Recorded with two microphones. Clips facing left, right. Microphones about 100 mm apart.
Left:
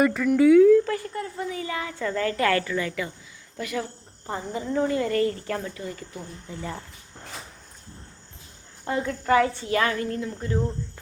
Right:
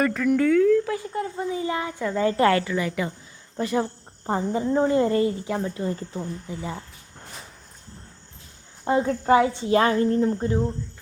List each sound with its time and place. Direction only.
0.0 s speech: 5° left (ahead or behind)
0.9 s speech: 10° right (ahead or behind)
1.1 s speech: 25° right (ahead or behind)
2.0 s speech: 15° right (ahead or behind)
3.6 s speech: 30° right (ahead or behind)
6.5 s speech: 10° right (ahead or behind)
8.8 s speech: 25° right (ahead or behind)